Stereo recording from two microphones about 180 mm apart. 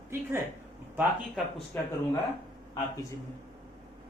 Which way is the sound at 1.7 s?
15° left (ahead or behind).